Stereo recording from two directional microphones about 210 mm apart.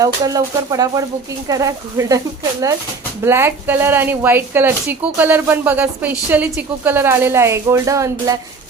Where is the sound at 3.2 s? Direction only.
10° right (ahead or behind).